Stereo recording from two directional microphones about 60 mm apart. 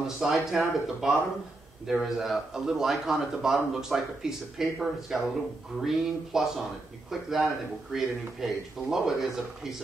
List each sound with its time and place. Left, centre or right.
0.0 s a man's voice: centre